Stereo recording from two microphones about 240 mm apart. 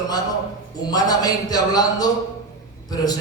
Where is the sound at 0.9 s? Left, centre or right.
Centre.